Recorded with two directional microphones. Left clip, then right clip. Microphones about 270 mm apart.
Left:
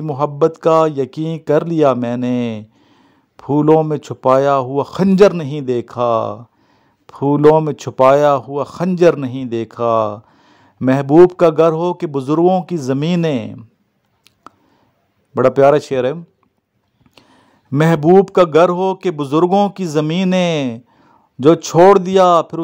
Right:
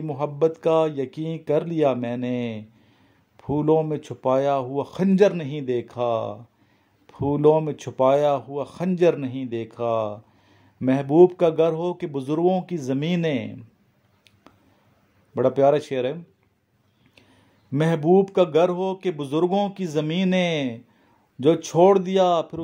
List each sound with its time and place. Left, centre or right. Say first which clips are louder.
0.0 s speech: left 7 dB; left
15.3 s speech: left 8 dB; left